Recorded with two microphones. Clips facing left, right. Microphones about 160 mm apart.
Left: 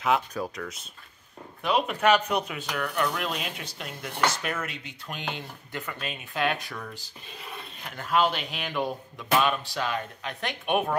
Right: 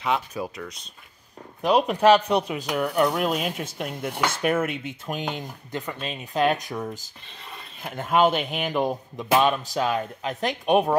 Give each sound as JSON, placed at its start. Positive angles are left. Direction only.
{"t": 0.0, "sound": "speech", "side_deg": 0}
{"t": 1.6, "sound": "speech", "side_deg": -40}
{"t": 8.0, "sound": "speech", "side_deg": -50}